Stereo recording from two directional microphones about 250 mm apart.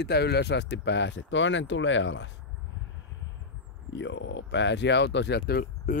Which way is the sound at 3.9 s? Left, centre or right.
Left.